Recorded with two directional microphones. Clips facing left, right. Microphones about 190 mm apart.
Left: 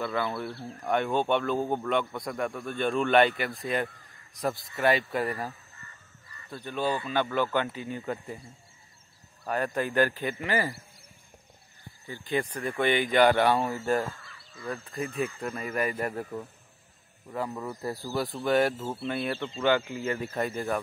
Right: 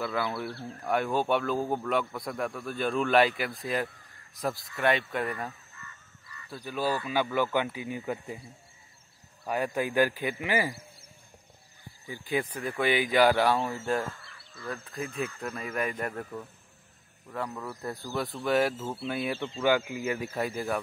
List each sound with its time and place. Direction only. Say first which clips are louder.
0.0 s speech: left 1 dB; 5° right (ahead or behind)
5.8 s goose: right 2 dB; 35° left (ahead or behind)
6.5 s speech: left 1 dB; 5° right (ahead or behind)
9.5 s speech: even; 10° right (ahead or behind)
12.1 s speech: left 1 dB; 5° right (ahead or behind)
18.0 s speech: left 1 dB; centre (ahead or behind)